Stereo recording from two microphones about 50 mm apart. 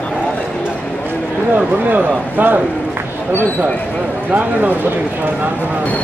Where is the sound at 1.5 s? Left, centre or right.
Right.